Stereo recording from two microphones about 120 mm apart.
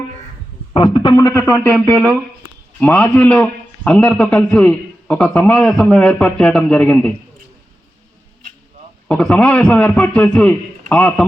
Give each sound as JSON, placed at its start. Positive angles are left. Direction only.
{"t": 0.7, "sound": "a sound", "side_deg": 50}
{"t": 1.1, "sound": "a man's voice", "side_deg": 20}
{"t": 9.2, "sound": "a man's voice", "side_deg": 10}